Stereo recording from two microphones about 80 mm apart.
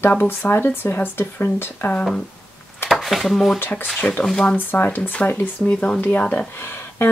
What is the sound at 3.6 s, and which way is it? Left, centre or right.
Speech, left.